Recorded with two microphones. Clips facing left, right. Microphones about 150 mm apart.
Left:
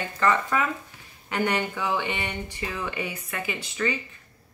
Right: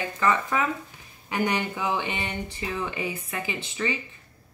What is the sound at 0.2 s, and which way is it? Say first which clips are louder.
Speech: left 1 dB; 20° right (ahead or behind).